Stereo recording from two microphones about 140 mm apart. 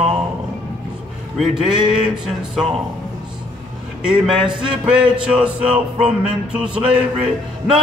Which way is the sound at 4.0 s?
5° right (ahead or behind).